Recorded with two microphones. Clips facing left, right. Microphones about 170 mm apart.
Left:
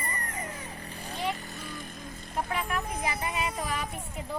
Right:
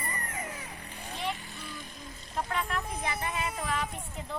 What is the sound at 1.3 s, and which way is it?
Vehicle, 40° left (ahead or behind).